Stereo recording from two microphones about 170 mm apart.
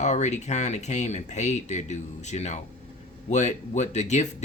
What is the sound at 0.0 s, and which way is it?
Speech, 45° left (ahead or behind).